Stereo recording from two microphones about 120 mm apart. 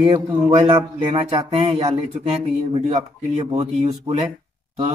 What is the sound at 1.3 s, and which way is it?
Speech, 60° right (ahead or behind).